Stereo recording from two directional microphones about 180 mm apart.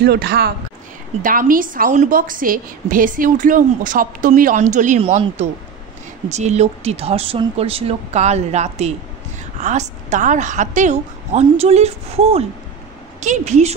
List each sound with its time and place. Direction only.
0.0 s speech: 65° right (ahead or behind)
1.2 s a woman's voice: 50° right (ahead or behind)